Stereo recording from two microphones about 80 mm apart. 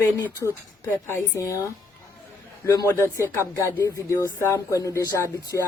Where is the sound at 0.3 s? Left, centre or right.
Left.